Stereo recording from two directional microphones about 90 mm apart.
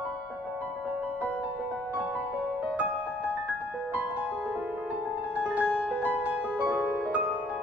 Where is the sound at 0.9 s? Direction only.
15° right (ahead or behind).